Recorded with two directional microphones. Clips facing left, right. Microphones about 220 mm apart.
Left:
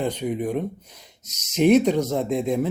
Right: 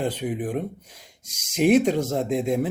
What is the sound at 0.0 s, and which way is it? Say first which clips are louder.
Speech: left 1 dB; 50° right (ahead or behind).